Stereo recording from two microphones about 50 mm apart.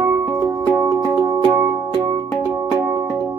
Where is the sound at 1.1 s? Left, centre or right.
Right.